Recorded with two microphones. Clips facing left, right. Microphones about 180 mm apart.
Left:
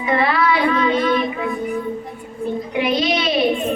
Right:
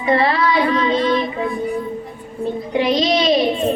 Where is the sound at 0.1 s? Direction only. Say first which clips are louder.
Right 2 dB; 35° right (ahead or behind).